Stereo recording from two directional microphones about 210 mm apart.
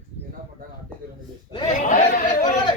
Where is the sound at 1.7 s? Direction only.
40° left (ahead or behind).